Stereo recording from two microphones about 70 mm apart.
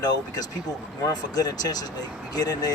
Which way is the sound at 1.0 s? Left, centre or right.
Left.